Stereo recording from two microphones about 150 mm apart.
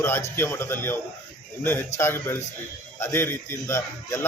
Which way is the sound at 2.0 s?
15° left (ahead or behind).